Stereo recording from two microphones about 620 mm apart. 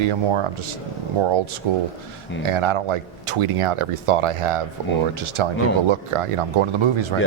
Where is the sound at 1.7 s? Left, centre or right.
Right.